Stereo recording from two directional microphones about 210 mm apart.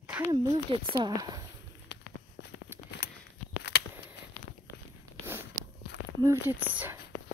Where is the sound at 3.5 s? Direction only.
55° left (ahead or behind).